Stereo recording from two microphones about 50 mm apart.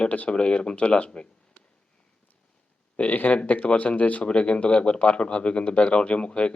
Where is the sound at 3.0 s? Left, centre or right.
Left.